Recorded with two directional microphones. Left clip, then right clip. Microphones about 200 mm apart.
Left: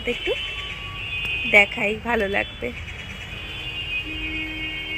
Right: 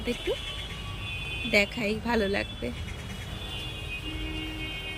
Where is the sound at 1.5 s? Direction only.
15° right (ahead or behind).